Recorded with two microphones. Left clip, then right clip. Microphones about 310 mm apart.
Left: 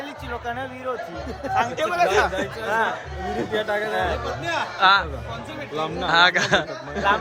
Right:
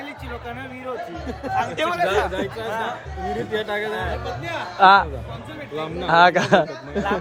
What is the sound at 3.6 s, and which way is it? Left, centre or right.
Speech, centre.